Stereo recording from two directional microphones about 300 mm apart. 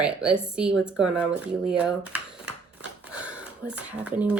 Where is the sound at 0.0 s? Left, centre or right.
Centre.